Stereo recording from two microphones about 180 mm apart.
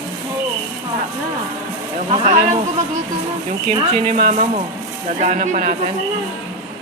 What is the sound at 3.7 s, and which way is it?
Speech, 30° right (ahead or behind).